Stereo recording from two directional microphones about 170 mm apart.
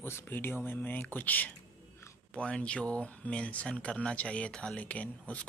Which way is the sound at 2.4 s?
5° left (ahead or behind).